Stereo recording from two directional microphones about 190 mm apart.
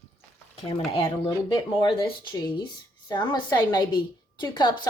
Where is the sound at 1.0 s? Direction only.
20° left (ahead or behind).